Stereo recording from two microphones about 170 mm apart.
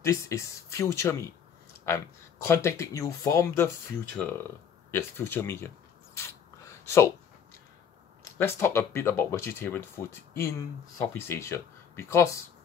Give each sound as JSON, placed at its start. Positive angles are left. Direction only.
{"t": 0.0, "sound": "speech", "side_deg": 15}
{"t": 4.2, "sound": "speech", "side_deg": 5}
{"t": 6.1, "sound": "a sound", "side_deg": 15}
{"t": 8.2, "sound": "speech", "side_deg": 15}